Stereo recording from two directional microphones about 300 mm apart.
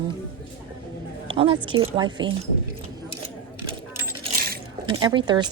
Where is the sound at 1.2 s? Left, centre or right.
Centre.